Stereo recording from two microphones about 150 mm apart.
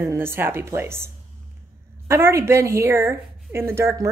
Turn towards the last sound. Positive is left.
turn(degrees=-15)  # may be behind; listen again after turning